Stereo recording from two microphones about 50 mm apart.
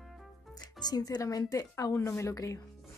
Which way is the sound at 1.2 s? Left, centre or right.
Left.